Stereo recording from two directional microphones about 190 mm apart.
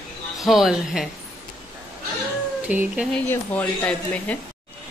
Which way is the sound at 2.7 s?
10° right (ahead or behind).